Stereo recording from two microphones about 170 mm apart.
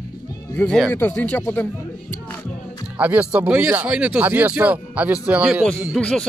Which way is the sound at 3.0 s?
10° right (ahead or behind).